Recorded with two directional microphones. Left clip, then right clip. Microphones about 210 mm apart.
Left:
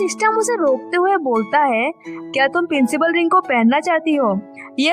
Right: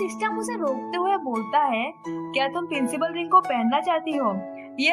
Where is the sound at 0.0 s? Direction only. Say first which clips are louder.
Left 10 dB; 50° left (ahead or behind).